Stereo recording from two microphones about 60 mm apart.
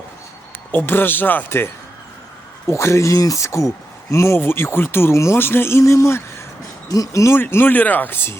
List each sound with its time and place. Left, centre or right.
0.7 s speech: left
2.6 s speech: left
5.8 s speech: left
6.8 s speech: left
7.3 s speech: left